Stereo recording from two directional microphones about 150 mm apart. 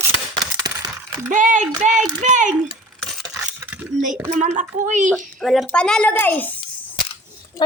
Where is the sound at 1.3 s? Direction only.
60° right (ahead or behind).